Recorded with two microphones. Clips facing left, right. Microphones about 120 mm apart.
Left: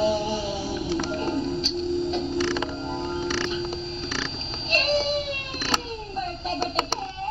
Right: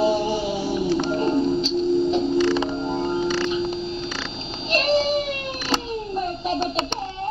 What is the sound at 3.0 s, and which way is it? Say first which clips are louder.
Music: right 5 dB; 15° right (ahead or behind).